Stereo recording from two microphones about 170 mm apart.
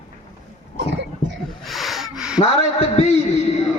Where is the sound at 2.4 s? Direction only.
40° left (ahead or behind).